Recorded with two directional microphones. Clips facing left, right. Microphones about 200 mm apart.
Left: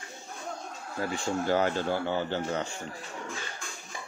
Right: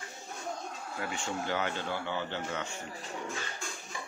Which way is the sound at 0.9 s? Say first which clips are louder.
Left 6 dB; 35° left (ahead or behind).